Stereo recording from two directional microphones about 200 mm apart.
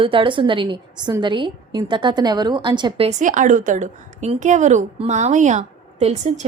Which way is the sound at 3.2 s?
40° right (ahead or behind).